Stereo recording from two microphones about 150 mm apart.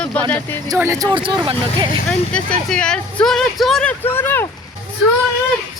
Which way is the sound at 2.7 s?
5° left (ahead or behind).